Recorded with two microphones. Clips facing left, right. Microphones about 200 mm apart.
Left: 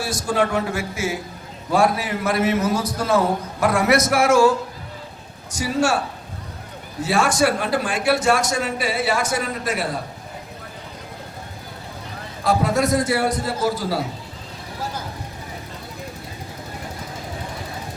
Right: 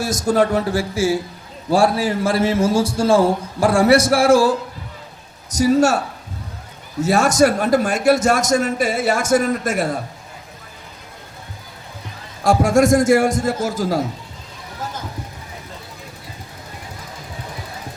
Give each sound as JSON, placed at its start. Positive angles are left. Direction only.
{"t": 0.0, "sound": "a man's voice", "side_deg": -45}
{"t": 7.0, "sound": "a man's voice", "side_deg": -45}
{"t": 12.4, "sound": "a man's voice", "side_deg": -45}